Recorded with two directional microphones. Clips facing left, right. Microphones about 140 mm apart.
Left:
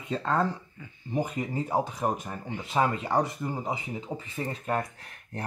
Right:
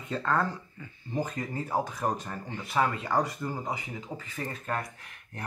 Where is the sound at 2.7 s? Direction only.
25° left (ahead or behind).